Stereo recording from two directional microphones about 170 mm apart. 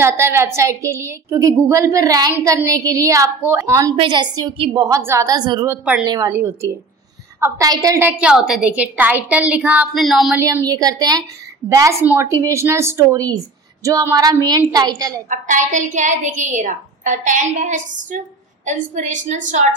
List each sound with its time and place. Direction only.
0.0 s a woman's voice: 15° right (ahead or behind)
3.9 s a woman's voice: 30° right (ahead or behind); by 10.4 s centre (ahead or behind)
10.7 s a woman's voice: 20° right (ahead or behind)
15.2 s a woman's voice: 50° right (ahead or behind)